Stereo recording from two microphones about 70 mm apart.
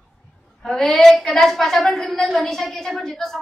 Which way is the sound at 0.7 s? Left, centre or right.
Centre.